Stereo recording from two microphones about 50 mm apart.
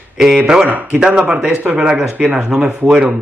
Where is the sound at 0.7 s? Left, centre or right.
Right.